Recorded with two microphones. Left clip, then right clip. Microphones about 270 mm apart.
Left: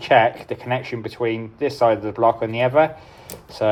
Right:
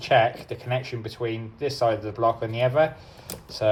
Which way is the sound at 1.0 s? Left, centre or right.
Left.